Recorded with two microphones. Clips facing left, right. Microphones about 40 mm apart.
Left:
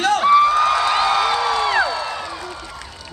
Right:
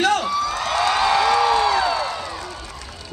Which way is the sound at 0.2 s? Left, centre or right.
Left.